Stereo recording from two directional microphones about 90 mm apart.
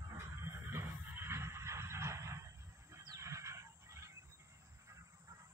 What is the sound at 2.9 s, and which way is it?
Bird, 35° right (ahead or behind).